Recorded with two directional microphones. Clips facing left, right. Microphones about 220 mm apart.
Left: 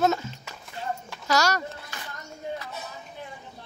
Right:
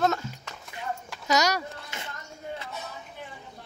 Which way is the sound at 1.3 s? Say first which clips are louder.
Even; 20° right (ahead or behind).